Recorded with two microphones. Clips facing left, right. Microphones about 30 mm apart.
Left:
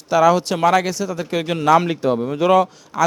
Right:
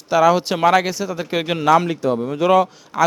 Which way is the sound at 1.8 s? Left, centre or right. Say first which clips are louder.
Left 1 dB; left.